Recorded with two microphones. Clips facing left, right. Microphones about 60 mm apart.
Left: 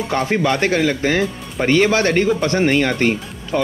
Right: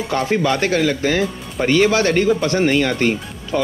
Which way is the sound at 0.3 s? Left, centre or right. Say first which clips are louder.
Even; centre.